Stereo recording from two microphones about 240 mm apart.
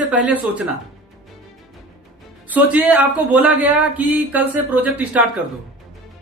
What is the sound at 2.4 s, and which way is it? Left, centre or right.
Speech, centre.